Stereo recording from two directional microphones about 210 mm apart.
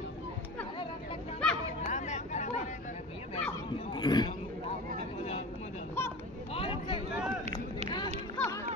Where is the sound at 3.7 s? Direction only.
20° left (ahead or behind).